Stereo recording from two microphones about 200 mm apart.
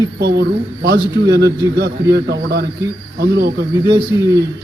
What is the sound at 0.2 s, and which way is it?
A man's voice, 55° right (ahead or behind).